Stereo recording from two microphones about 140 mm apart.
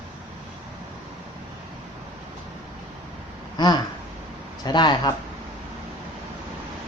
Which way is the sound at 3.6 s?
30° left (ahead or behind).